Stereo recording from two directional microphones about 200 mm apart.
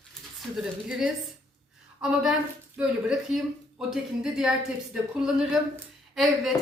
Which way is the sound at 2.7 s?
Centre (ahead or behind).